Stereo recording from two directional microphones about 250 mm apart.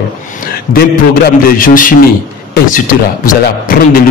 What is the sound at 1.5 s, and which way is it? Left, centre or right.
A man's voice, left.